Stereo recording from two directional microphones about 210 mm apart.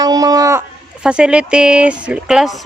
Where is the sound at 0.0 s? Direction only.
15° right (ahead or behind).